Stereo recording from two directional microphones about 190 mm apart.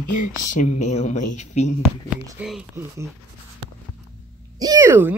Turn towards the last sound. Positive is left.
turn(degrees=-10)  # may be behind; listen again after turning